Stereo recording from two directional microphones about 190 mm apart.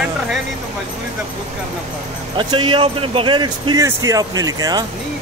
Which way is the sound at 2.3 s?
25° right (ahead or behind).